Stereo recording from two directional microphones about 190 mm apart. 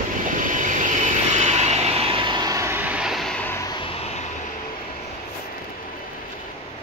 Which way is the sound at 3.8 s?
35° left (ahead or behind).